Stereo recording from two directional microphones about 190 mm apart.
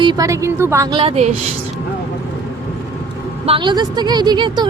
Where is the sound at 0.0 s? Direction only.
20° right (ahead or behind).